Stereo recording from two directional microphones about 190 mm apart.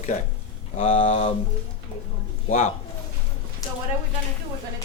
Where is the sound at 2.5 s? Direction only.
40° left (ahead or behind).